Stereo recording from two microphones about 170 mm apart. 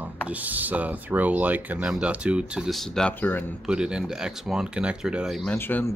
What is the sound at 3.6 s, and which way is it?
Speech, 5° right (ahead or behind).